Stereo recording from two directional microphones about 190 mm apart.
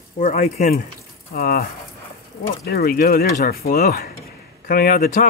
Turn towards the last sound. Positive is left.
turn(degrees=50)  # may be behind; listen again after turning